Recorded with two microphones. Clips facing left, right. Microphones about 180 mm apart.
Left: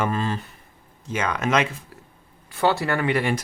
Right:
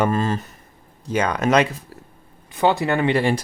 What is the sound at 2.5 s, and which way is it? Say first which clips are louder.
Speech: right 3 dB; 15° right (ahead or behind).